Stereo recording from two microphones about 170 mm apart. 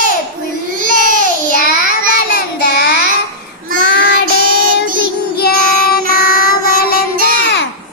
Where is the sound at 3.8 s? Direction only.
90° left.